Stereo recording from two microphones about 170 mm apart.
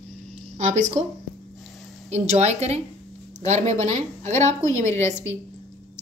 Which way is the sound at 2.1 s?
40° right (ahead or behind).